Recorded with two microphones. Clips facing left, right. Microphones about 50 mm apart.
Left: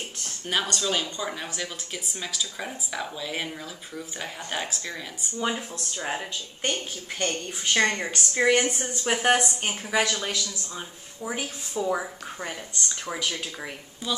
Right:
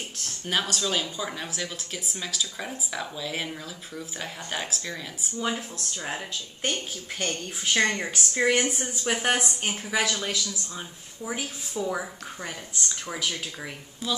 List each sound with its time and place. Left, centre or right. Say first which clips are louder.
0.2 s speech: even; centre